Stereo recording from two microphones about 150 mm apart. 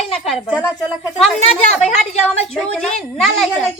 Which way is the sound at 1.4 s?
45° left (ahead or behind).